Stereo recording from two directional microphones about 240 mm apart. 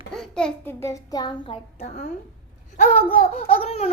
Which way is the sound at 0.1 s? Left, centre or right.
Centre.